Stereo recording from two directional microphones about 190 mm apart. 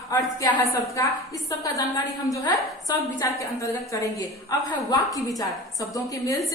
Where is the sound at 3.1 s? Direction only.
15° left (ahead or behind).